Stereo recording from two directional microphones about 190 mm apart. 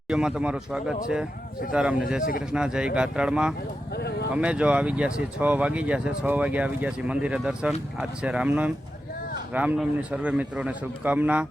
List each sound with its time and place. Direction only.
0.1 s speech: 5° right (ahead or behind)
3.9 s a sound: 60° left (ahead or behind)
4.4 s speech: 5° right (ahead or behind)